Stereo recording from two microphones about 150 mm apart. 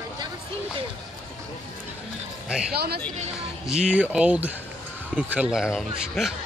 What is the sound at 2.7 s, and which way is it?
Speech, 90° right.